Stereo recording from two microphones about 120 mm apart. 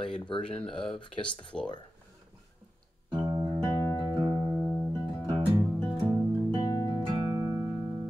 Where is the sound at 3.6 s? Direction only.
30° left (ahead or behind).